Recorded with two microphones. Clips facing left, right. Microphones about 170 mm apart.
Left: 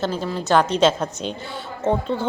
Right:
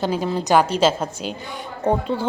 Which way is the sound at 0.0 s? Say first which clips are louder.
Right 2 dB; 15° right (ahead or behind).